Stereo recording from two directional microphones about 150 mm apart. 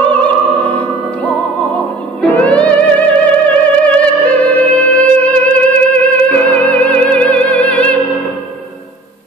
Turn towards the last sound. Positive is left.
turn(degrees=10)  # may be behind; listen again after turning